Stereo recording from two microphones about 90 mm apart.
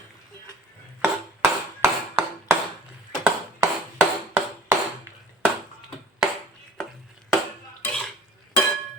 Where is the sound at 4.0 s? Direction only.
25° right (ahead or behind).